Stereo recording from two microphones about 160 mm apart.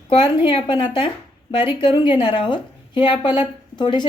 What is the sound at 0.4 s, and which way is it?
A woman's voice, 30° left (ahead or behind).